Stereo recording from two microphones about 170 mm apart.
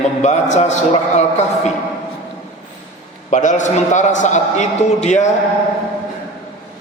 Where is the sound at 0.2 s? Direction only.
45° left (ahead or behind).